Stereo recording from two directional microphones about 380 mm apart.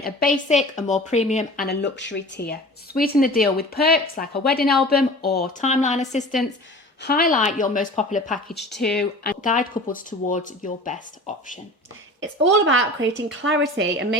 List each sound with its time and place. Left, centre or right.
0.0 s speech: left
8.4 s speech: centre
9.2 s speech: left
12.2 s a woman's voice: right